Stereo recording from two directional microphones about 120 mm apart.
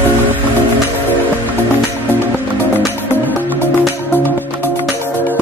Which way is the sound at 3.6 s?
15° left (ahead or behind).